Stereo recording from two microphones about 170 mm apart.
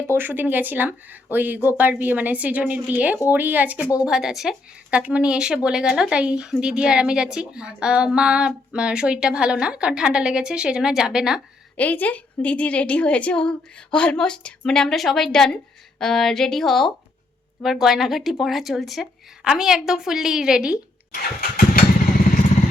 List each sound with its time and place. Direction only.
0.1 s speech: 10° right (ahead or behind)
11.8 s speech: 10° left (ahead or behind)
21.2 s vehicle: 65° left (ahead or behind)